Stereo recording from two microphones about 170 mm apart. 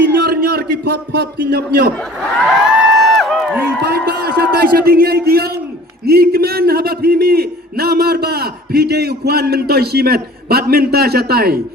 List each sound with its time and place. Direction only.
0.0 s a man's voice: 65° right (ahead or behind)
2.5 s a sound: 5° right (ahead or behind)
3.8 s a man's voice: 65° right (ahead or behind)